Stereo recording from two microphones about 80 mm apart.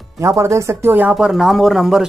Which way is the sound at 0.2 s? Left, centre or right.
Right.